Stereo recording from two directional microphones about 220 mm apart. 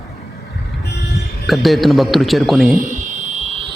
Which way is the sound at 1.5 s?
Centre (ahead or behind).